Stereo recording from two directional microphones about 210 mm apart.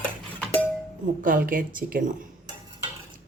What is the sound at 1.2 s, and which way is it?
A woman's voice, 40° right (ahead or behind).